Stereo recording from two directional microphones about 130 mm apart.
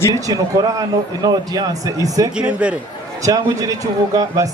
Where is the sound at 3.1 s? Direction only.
25° right (ahead or behind).